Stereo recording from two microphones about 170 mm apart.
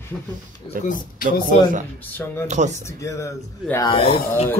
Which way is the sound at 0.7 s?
30° left (ahead or behind).